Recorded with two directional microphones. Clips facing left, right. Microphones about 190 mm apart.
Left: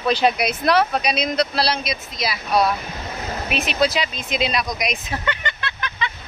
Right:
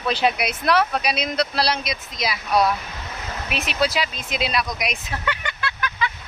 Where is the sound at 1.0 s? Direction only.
5° right (ahead or behind).